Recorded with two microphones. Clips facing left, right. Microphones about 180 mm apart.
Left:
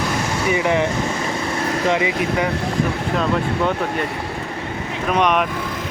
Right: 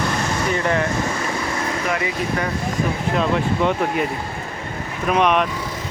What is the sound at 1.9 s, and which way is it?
Speech, 20° left (ahead or behind).